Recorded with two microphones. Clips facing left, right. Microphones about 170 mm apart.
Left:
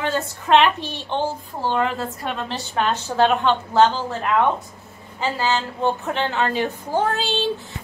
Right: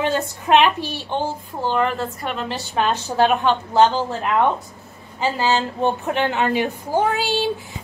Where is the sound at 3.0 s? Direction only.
10° right (ahead or behind).